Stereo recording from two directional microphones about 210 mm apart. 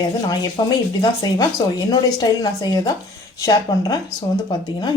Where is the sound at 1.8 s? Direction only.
20° left (ahead or behind).